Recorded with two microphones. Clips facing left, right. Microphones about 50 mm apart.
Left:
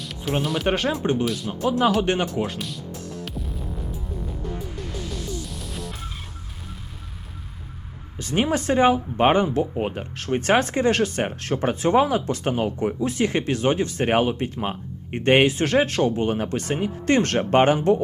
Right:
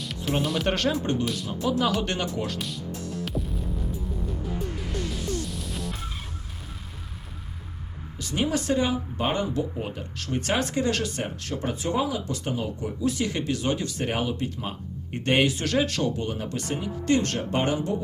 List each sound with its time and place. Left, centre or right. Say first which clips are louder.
0.0 s music: left 1 dB; centre
0.4 s speech: left 2 dB; centre
0.7 s speech: left 3 dB; centre
1.2 s speech: left 4 dB; centre
1.5 s speech: left 2 dB; left
2.0 s speech: left 6 dB; left
5.5 s music: even; centre
8.2 s speech: left 4 dB; left